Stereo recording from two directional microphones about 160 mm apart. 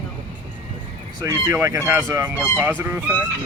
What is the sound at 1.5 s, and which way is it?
Speech, 15° right (ahead or behind).